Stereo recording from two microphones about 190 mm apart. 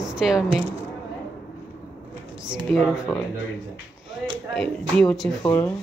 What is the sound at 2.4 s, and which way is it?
Speech, centre (ahead or behind).